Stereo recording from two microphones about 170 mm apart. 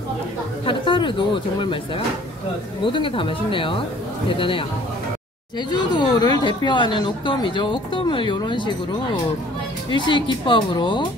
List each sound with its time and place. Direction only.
0.7 s speech: 30° left (ahead or behind)
2.8 s speech: 30° left (ahead or behind)
5.7 s speech: 25° left (ahead or behind)
9.8 s speech: 30° left (ahead or behind)